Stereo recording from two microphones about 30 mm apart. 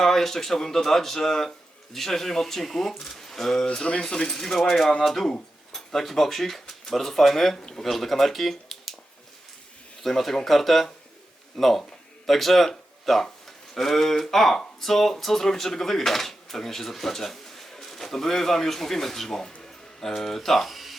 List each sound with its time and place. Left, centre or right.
0.0 s speech: centre
10.0 s speech: centre
20.7 s a sound: centre